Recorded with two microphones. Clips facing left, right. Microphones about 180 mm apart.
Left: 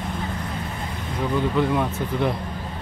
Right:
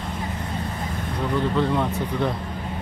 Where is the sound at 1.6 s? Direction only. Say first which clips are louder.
Even; 10° left (ahead or behind).